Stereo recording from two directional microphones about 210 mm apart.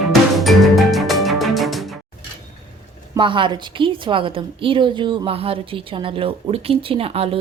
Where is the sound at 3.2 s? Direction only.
25° right (ahead or behind).